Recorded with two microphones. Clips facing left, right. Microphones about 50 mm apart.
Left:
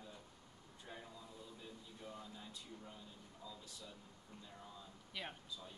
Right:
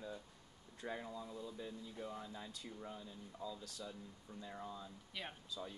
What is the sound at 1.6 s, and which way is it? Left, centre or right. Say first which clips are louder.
Speech: right 6 dB; right.